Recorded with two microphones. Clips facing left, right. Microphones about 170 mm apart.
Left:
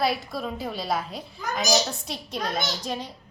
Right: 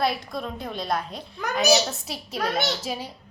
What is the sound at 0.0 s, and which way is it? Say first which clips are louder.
A woman's voice: even; centre (ahead or behind).